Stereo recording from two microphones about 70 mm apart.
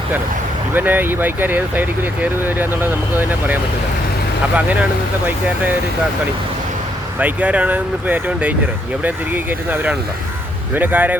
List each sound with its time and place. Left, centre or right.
0.7 s speech: right
7.2 s speech: centre